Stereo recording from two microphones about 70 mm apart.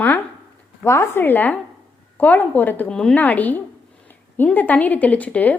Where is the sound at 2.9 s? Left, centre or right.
Centre.